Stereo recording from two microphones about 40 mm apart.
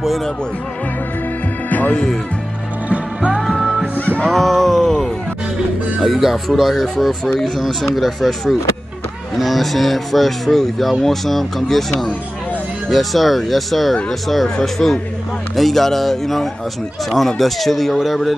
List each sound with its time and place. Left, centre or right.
1.7 s music: left
2.9 s music: right
3.3 s music: centre
4.3 s a sound: centre
6.0 s speech: centre
12.9 s speech: centre